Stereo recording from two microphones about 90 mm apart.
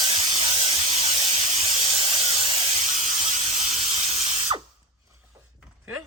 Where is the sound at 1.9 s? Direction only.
85° right; by 2.6 s 70° right (ahead or behind).